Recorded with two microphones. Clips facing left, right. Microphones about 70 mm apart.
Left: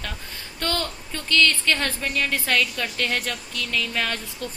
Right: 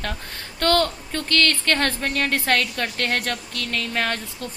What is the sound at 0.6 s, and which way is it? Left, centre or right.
A woman's voice, right.